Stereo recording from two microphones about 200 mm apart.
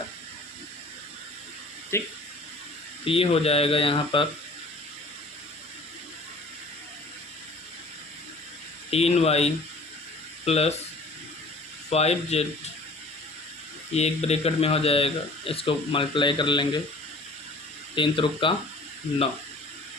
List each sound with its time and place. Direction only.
1.9 s speech: 10° left (ahead or behind)
3.0 s speech: 30° left (ahead or behind)
8.9 s speech: 30° left (ahead or behind)
11.9 s speech: 30° left (ahead or behind)
13.9 s speech: 30° left (ahead or behind)
17.9 s speech: 25° left (ahead or behind)